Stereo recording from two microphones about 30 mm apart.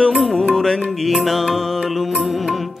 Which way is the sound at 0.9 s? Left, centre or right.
Centre.